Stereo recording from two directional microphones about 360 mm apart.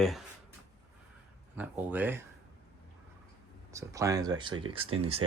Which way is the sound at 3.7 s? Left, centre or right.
Centre.